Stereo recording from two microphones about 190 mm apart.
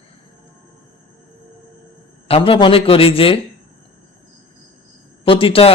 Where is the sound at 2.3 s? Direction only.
30° left (ahead or behind).